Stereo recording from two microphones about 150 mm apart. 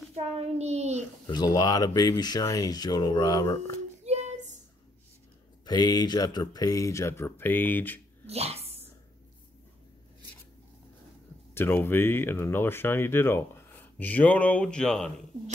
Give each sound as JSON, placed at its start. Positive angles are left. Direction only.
{"t": 0.1, "sound": "a child's voice", "side_deg": -45}
{"t": 1.2, "sound": "speech", "side_deg": 30}
{"t": 4.0, "sound": "a sound", "side_deg": -50}
{"t": 5.7, "sound": "speech", "side_deg": 25}
{"t": 8.3, "sound": "speech", "side_deg": -45}
{"t": 11.5, "sound": "speech", "side_deg": 15}